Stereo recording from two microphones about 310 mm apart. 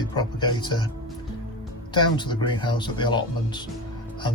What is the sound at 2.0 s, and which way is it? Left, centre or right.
Speech, centre.